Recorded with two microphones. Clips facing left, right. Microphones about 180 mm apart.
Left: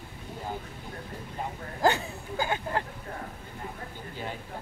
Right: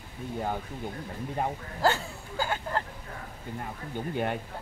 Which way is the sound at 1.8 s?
20° left (ahead or behind).